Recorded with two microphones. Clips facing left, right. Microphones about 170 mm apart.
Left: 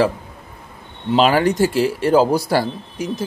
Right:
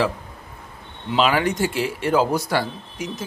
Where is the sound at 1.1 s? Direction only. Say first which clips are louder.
Left 5 dB; 40° left (ahead or behind).